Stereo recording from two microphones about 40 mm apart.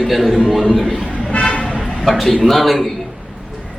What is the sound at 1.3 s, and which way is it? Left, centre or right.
Toot, left.